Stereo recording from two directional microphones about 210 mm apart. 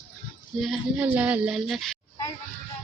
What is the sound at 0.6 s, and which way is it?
Speech, 5° right (ahead or behind).